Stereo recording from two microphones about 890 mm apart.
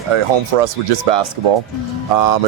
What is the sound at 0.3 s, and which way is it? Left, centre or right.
Speech, right.